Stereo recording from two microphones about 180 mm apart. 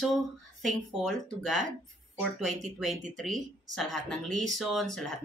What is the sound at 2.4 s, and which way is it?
Speech, 40° right (ahead or behind).